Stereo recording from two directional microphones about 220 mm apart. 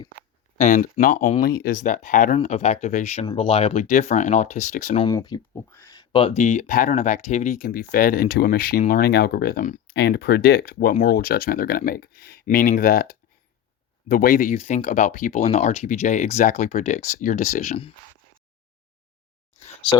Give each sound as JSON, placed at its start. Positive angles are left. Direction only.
{"t": 0.6, "sound": "speech", "side_deg": 35}
{"t": 5.0, "sound": "speech", "side_deg": 20}
{"t": 9.9, "sound": "speech", "side_deg": 50}